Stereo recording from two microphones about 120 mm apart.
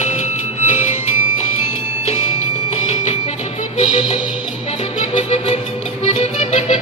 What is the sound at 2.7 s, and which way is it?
Music, 65° left (ahead or behind).